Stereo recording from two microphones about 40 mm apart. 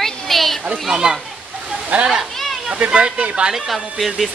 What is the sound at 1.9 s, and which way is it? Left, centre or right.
Speech, right.